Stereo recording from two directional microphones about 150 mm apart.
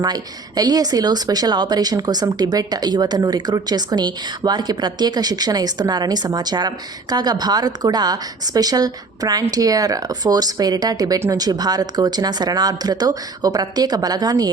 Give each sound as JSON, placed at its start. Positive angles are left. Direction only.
{"t": 0.0, "sound": "speech", "side_deg": -25}